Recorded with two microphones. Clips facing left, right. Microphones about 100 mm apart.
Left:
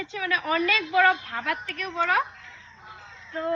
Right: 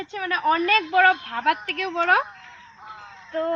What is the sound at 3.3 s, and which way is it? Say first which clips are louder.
Speech: right 3 dB; 55° right (ahead or behind).